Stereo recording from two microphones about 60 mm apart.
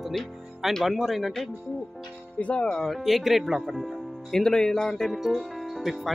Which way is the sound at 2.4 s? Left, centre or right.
Centre.